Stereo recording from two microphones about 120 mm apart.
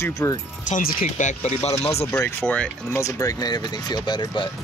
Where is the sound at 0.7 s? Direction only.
90° left; by 1.9 s 65° left (ahead or behind).